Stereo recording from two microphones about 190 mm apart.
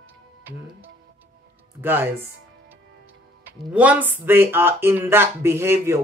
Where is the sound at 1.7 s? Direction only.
10° right (ahead or behind).